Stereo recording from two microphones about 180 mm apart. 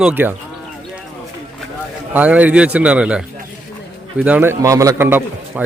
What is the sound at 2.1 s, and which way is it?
A man's voice, 10° right (ahead or behind).